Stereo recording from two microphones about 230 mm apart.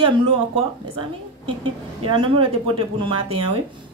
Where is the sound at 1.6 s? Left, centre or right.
Right.